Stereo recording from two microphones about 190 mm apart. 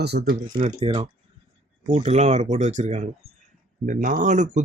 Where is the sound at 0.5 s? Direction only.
30° right (ahead or behind).